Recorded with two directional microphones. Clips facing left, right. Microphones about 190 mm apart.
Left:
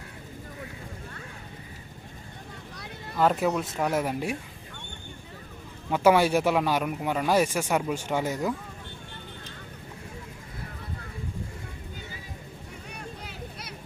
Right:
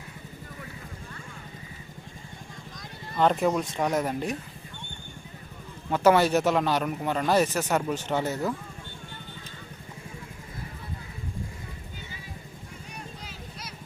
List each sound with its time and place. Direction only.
3.2 s speech: 5° left (ahead or behind)
5.9 s speech: 10° left (ahead or behind)
13.2 s vehicle: 60° left (ahead or behind)